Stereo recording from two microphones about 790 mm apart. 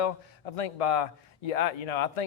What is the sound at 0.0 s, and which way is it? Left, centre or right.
Speech, left.